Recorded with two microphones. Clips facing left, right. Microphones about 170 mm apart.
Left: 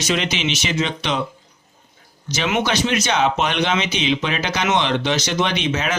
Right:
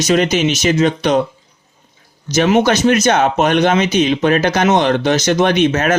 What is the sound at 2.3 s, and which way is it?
Speech, 45° right (ahead or behind).